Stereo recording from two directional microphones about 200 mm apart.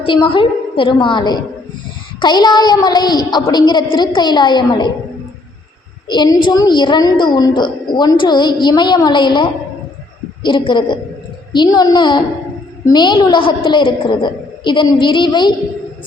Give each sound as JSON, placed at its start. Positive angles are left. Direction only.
{"t": 0.0, "sound": "a woman's voice", "side_deg": 25}
{"t": 6.1, "sound": "a woman's voice", "side_deg": 20}